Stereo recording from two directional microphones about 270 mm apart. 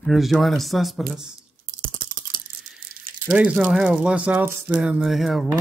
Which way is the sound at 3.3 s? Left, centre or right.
Centre.